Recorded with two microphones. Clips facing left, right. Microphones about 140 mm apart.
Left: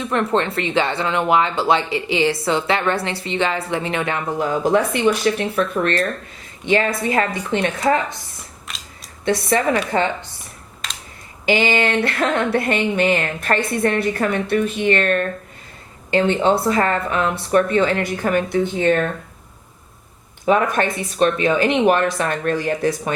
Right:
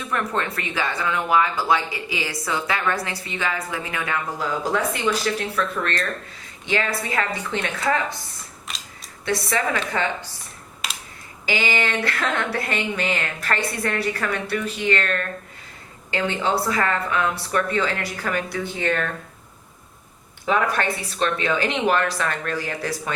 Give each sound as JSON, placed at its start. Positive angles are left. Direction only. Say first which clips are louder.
{"t": 0.0, "sound": "speech", "louder": "left 6 dB", "side_deg": 25}
{"t": 7.3, "sound": "speech", "louder": "left 6 dB", "side_deg": 15}
{"t": 8.7, "sound": "scissors", "louder": "even", "side_deg": 0}
{"t": 9.2, "sound": "speech", "louder": "left 5 dB", "side_deg": 20}
{"t": 10.8, "sound": "computer keyboard", "louder": "right 1 dB", "side_deg": -5}
{"t": 11.4, "sound": "speech", "louder": "left 6 dB", "side_deg": 25}
{"t": 20.4, "sound": "speech", "louder": "left 5 dB", "side_deg": 20}